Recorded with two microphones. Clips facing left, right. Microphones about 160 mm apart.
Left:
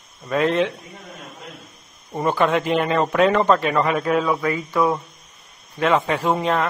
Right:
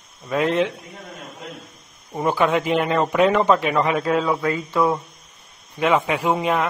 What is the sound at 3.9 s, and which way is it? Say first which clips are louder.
Speech: even; 25° right (ahead or behind).